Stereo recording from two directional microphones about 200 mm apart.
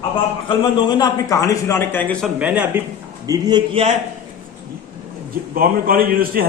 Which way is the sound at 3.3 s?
20° right (ahead or behind).